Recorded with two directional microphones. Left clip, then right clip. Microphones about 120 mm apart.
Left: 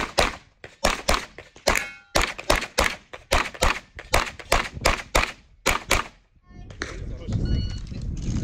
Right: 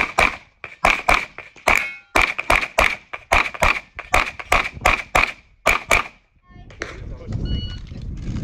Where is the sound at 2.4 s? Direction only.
35° left (ahead or behind).